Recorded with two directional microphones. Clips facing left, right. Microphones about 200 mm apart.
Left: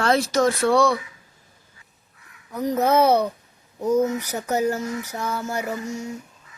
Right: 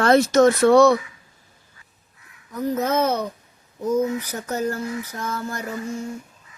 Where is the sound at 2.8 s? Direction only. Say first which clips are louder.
Left 6 dB; 15° left (ahead or behind).